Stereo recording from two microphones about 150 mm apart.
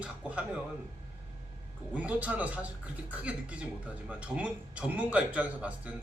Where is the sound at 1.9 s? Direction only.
10° right (ahead or behind).